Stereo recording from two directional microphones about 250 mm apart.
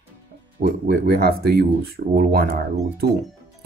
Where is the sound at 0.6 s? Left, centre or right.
Right.